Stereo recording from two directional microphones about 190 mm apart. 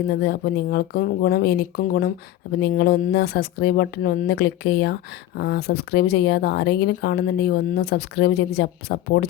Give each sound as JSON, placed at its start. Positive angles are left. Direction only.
{"t": 0.1, "sound": "speech", "side_deg": 60}